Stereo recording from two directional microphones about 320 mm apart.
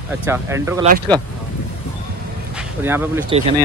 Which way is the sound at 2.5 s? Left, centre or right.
Centre.